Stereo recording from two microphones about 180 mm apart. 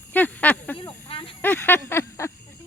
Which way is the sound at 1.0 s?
30° left (ahead or behind).